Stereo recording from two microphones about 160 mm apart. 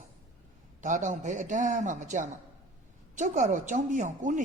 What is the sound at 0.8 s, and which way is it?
A woman's voice, 50° right (ahead or behind).